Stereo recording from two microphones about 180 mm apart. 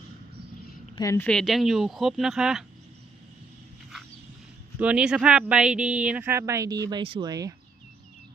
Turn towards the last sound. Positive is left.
turn(degrees=-20)  # may be behind; listen again after turning